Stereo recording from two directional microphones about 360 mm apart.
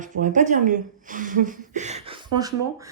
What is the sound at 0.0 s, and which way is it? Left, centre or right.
Speech, right.